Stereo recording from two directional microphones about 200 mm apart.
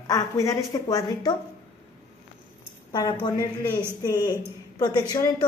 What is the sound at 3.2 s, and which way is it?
Speech, 20° left (ahead or behind).